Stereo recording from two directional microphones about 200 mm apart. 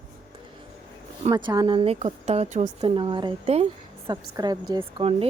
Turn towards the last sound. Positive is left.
turn(degrees=-30)  # may be behind; listen again after turning